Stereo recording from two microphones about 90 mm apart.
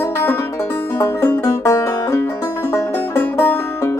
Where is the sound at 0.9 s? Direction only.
25° left (ahead or behind).